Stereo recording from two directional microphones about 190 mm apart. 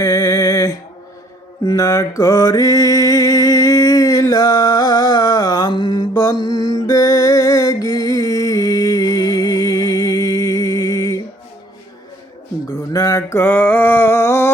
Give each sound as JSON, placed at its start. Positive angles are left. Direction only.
{"t": 0.0, "sound": "music", "side_deg": 15}
{"t": 1.6, "sound": "mantra", "side_deg": 15}
{"t": 6.4, "sound": "music", "side_deg": 20}
{"t": 12.9, "sound": "a sound", "side_deg": 15}